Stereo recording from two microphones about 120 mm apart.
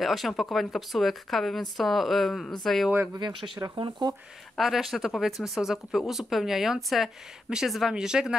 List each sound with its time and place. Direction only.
0.0 s speech: centre (ahead or behind)
3.2 s speech: 40° right (ahead or behind)
4.6 s speech: centre (ahead or behind)